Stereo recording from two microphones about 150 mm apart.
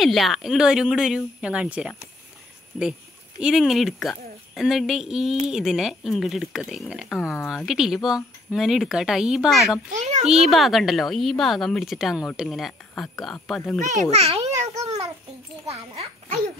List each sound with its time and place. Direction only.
0.0 s speech: centre (ahead or behind)
9.9 s a child's voice: 50° right (ahead or behind)
10.2 s speech: centre (ahead or behind)
13.7 s a child's voice: 55° right (ahead or behind)
14.1 s a child's voice: 40° right (ahead or behind)
14.5 s babbling: 20° right (ahead or behind)
15.6 s a child's voice: 45° right (ahead or behind)